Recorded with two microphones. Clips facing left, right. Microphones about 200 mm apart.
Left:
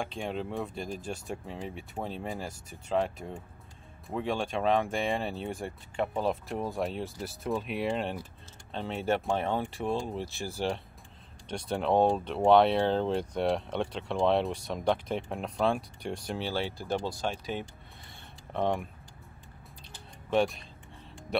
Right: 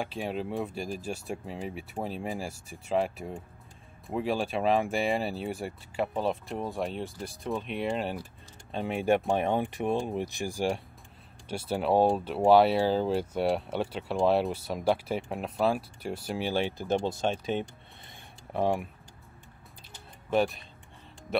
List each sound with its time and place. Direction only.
0.0 s speech: 5° right (ahead or behind)
8.7 s speech: 15° right (ahead or behind)
18.5 s speech: 5° right (ahead or behind)
20.2 s speech: centre (ahead or behind)